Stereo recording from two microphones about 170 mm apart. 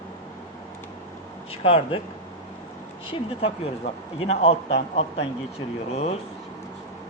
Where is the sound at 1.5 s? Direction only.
35° left (ahead or behind).